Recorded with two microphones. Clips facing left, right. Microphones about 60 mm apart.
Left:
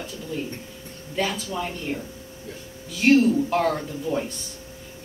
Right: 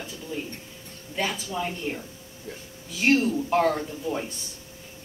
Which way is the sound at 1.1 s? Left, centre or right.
Centre.